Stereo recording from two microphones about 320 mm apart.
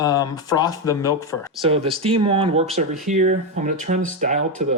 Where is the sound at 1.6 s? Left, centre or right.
Centre.